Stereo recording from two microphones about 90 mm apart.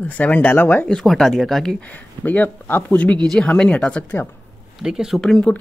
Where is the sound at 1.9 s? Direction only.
15° left (ahead or behind).